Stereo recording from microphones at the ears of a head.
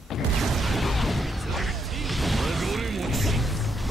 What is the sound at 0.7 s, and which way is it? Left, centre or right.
Music, centre.